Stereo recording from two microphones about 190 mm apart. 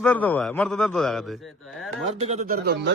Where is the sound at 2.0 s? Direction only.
35° right (ahead or behind); by 2.9 s 55° right (ahead or behind).